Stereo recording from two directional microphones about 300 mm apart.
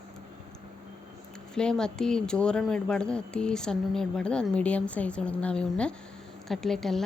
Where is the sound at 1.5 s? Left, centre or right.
Centre.